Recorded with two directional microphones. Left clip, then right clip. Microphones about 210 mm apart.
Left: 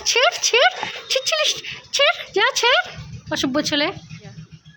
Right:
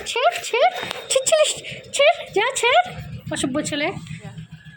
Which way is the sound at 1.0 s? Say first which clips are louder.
Right 2 dB; 10° left (ahead or behind).